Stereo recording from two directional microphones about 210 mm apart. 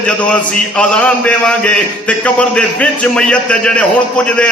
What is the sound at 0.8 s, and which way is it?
A man's voice, 5° left (ahead or behind).